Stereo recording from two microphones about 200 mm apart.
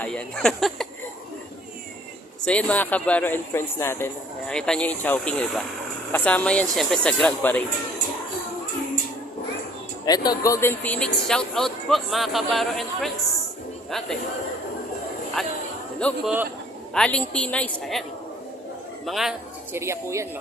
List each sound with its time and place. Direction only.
0.0 s speech: 5° left (ahead or behind)
2.4 s speech: 5° left (ahead or behind)
10.1 s speech: 20° left (ahead or behind); by 13.1 s centre (ahead or behind)
15.4 s speech: centre (ahead or behind)
19.0 s speech: centre (ahead or behind)
19.7 s a woman's voice: 15° right (ahead or behind)